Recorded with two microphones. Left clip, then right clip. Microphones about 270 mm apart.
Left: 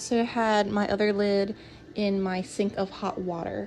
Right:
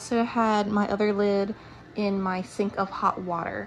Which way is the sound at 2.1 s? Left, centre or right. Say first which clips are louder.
Right 1 dB; left.